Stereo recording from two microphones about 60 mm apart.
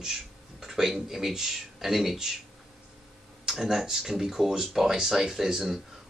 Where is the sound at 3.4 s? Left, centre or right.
Centre.